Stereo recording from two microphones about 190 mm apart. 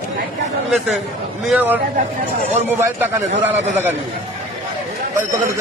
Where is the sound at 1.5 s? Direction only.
10° right (ahead or behind).